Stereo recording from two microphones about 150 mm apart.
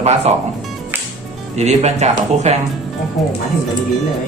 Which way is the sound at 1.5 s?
45° right (ahead or behind).